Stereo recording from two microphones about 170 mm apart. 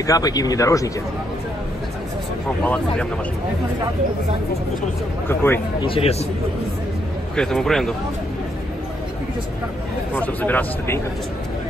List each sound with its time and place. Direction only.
0.0 s speech: 20° left (ahead or behind)
2.6 s speech: 10° left (ahead or behind)
5.3 s speech: 15° left (ahead or behind)
5.8 s a man's voice: 35° left (ahead or behind)
7.3 s speech: centre (ahead or behind)
10.1 s speech: 10° left (ahead or behind)